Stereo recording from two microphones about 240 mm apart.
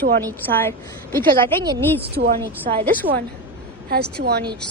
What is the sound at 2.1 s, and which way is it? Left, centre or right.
Speech, right.